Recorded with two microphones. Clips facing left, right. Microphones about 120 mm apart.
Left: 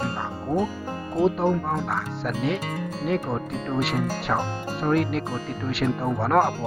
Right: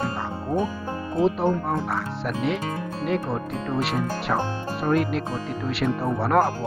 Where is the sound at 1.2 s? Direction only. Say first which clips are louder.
Even; centre (ahead or behind).